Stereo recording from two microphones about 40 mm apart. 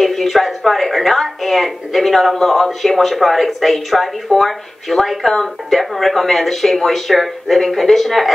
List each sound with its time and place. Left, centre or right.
0.0 s a woman's voice: centre